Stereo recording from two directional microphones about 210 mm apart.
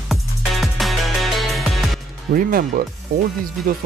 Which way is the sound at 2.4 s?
45° right (ahead or behind).